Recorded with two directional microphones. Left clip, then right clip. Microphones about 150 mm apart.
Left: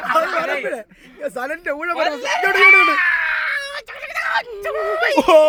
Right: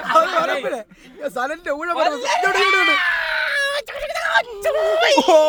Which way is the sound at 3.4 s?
85° right.